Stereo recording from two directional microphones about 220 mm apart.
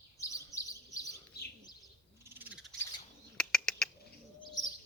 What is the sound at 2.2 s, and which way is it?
Cat, 10° right (ahead or behind).